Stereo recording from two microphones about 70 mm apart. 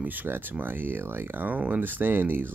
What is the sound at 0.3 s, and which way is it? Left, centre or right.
Speech, right.